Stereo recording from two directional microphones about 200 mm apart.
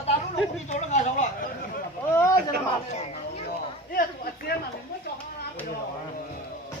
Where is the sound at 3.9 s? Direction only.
50° left (ahead or behind).